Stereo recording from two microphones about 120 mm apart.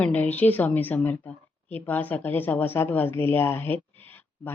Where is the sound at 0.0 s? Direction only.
10° left (ahead or behind).